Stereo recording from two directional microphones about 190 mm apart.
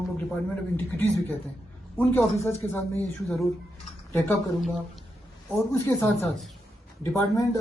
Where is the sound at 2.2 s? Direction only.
15° left (ahead or behind).